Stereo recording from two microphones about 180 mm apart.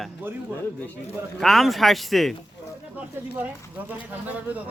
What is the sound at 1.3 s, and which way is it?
A man's voice, centre (ahead or behind).